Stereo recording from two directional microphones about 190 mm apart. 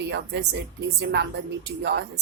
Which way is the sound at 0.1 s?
65° right (ahead or behind).